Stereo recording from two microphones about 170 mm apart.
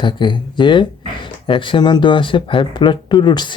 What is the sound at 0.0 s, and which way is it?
Speech, 30° left (ahead or behind).